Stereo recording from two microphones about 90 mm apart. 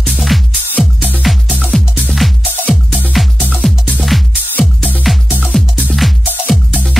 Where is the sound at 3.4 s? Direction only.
20° right (ahead or behind).